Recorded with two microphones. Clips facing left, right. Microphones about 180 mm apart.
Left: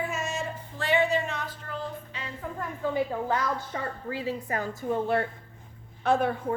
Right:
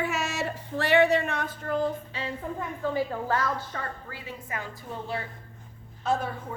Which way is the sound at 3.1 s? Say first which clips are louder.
Even; 15° left (ahead or behind).